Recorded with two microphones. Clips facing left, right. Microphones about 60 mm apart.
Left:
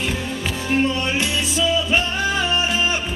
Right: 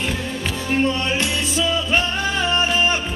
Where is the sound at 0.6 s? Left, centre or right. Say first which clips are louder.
Even; centre.